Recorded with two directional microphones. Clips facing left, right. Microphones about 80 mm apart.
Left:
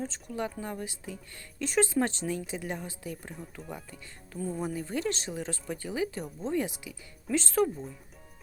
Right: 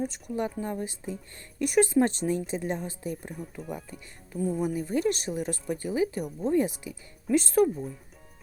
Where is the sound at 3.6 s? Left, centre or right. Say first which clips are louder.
Right 4 dB; centre.